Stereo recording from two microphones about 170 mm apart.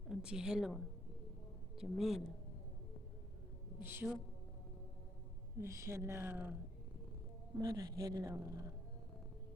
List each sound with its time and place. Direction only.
0.1 s a woman's voice: 5° right (ahead or behind)
3.8 s speech: 10° right (ahead or behind)
5.5 s speech: 15° right (ahead or behind)
7.6 s speech: 20° right (ahead or behind)